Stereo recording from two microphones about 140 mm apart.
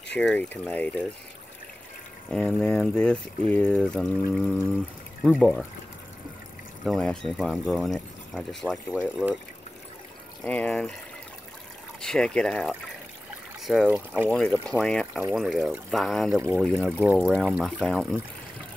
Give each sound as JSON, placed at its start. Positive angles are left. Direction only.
{"t": 0.2, "sound": "speech", "side_deg": 10}
{"t": 2.3, "sound": "speech", "side_deg": 5}
{"t": 6.8, "sound": "speech", "side_deg": 0}
{"t": 10.4, "sound": "speech", "side_deg": 5}
{"t": 12.0, "sound": "speech", "side_deg": 5}
{"t": 16.3, "sound": "speech", "side_deg": -20}